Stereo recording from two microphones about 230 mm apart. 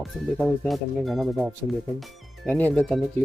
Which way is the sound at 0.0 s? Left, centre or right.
Centre.